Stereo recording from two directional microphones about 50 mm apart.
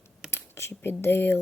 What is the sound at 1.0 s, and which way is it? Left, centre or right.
Speech, left.